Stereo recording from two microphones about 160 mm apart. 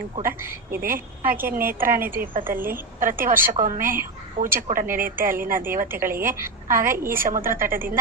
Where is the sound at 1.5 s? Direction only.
65° right (ahead or behind).